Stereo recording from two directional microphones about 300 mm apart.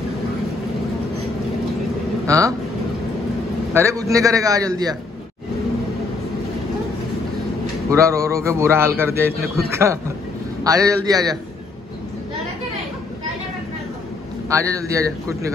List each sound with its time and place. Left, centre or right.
2.2 s speech: centre
3.7 s a man's voice: centre
7.9 s a man's voice: centre
14.5 s a man's voice: centre